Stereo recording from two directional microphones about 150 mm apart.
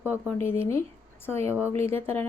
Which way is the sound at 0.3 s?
15° left (ahead or behind).